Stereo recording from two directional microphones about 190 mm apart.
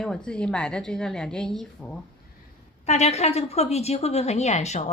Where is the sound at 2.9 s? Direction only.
35° left (ahead or behind).